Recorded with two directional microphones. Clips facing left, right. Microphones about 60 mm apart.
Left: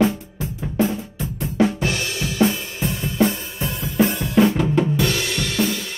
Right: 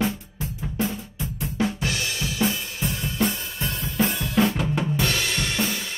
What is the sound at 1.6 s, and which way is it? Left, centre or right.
Drum, left.